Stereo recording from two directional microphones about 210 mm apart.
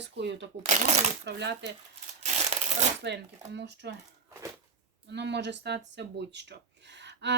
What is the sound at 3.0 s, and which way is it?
Speech, 55° right (ahead or behind).